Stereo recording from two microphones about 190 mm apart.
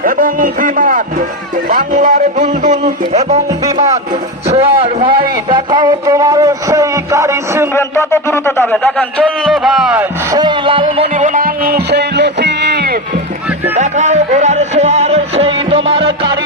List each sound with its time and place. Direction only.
0.0 s a man's voice: 45° right (ahead or behind)
4.4 s speech: 35° right (ahead or behind); by 7.7 s 15° right (ahead or behind)
7.7 s a man's voice: 15° left (ahead or behind); by 10.1 s 5° right (ahead or behind)
10.3 s music: 25° right (ahead or behind)
11.1 s music: 40° right (ahead or behind); by 13.0 s 55° right (ahead or behind)
13.7 s music: 40° right (ahead or behind)